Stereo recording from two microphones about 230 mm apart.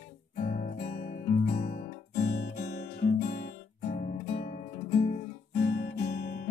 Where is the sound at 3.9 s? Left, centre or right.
Left.